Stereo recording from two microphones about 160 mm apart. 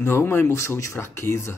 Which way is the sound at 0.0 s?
15° left (ahead or behind).